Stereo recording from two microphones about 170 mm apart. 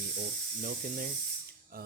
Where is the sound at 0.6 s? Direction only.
55° right (ahead or behind).